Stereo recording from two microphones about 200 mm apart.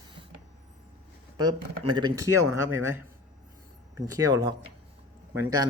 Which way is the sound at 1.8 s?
20° right (ahead or behind).